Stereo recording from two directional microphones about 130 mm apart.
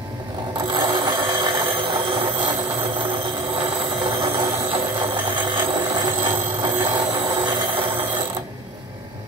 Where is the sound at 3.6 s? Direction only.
45° right (ahead or behind).